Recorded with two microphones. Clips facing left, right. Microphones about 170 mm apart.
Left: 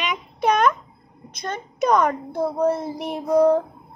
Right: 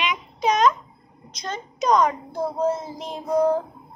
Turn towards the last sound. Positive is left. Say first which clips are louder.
# left 4 dB
turn(degrees=65)  # may be behind; listen again after turning